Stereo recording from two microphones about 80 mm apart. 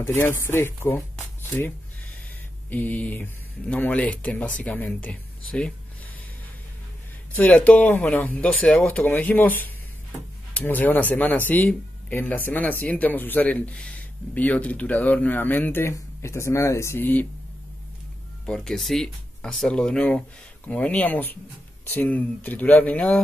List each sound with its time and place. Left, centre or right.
0.0 s speech: left
2.7 s speech: left
7.3 s speech: centre
18.4 s speech: centre